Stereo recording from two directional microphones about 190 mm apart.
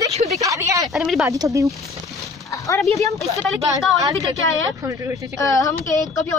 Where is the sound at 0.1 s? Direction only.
35° right (ahead or behind).